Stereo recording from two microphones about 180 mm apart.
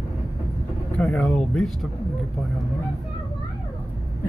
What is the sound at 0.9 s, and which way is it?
Speech, centre (ahead or behind).